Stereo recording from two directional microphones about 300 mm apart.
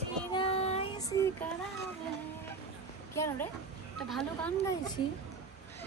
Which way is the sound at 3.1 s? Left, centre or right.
Centre.